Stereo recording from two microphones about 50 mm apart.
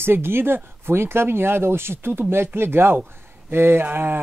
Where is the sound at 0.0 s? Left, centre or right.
Right.